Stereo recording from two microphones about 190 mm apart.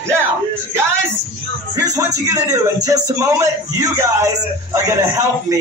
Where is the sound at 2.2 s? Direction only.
15° right (ahead or behind).